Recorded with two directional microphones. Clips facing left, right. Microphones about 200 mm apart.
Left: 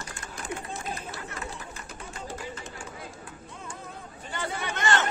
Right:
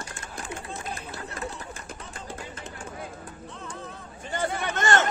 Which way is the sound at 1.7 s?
50° right (ahead or behind).